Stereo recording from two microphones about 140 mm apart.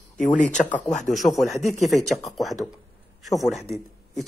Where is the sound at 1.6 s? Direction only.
55° left (ahead or behind).